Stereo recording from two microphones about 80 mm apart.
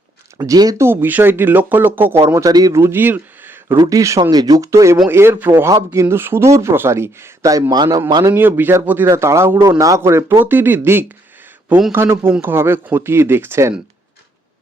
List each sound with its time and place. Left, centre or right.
0.3 s speech: right
0.8 s speech: right
2.4 s speech: right
2.7 s speech: right
3.8 s speech: right
4.2 s speech: right
4.7 s speech: right
7.4 s speech: right
8.3 s speech: right
9.0 s speech: right
10.0 s speech: right